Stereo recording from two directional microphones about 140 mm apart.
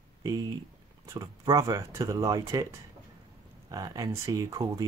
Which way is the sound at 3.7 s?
25° right (ahead or behind).